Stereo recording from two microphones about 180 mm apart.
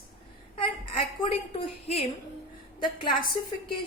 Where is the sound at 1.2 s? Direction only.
35° left (ahead or behind).